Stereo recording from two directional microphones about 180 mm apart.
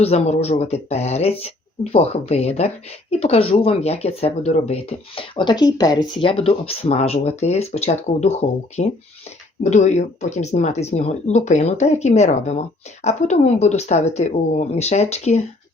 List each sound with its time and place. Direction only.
0.0 s speech: 35° left (ahead or behind)